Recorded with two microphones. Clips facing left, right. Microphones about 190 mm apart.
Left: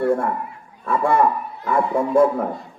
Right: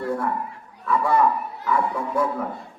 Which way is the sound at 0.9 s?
50° left (ahead or behind).